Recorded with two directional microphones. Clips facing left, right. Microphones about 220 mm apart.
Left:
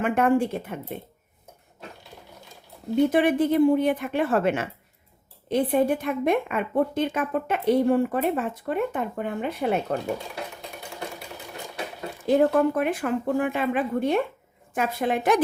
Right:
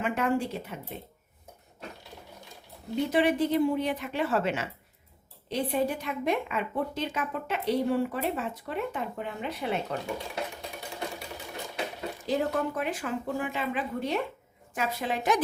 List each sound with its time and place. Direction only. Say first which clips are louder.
0.0 s a woman's voice: left 6 dB; 55° left (ahead or behind)
2.9 s a woman's voice: left 5 dB; 50° left (ahead or behind)
12.2 s speech: left 9 dB; 55° left (ahead or behind)